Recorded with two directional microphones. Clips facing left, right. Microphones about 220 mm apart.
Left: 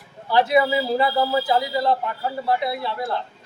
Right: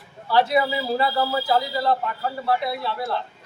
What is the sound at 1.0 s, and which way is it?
Speech, 15° left (ahead or behind).